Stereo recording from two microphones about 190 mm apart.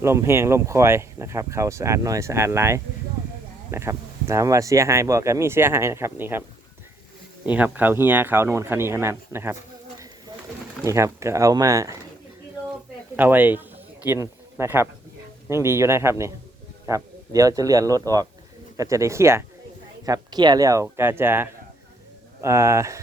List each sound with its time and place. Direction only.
0.0 s speech: 15° right (ahead or behind)
7.4 s speech: 10° right (ahead or behind)
10.8 s speech: 15° right (ahead or behind)
13.1 s speech: 10° right (ahead or behind)